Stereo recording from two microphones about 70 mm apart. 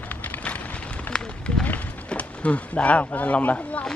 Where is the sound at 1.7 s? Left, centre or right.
Centre.